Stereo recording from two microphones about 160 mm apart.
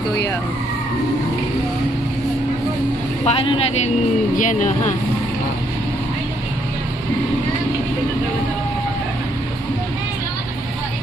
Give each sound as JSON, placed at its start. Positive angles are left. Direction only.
{"t": 3.3, "sound": "speech", "side_deg": 35}
{"t": 4.4, "sound": "speech", "side_deg": 55}